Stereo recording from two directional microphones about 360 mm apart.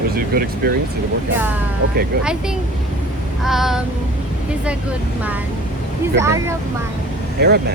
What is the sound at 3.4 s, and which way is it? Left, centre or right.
Speech, centre.